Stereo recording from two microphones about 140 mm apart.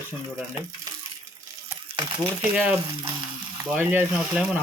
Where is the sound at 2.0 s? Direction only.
35° right (ahead or behind).